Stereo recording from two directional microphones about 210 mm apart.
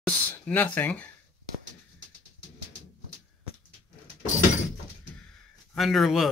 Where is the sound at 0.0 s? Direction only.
5° left (ahead or behind).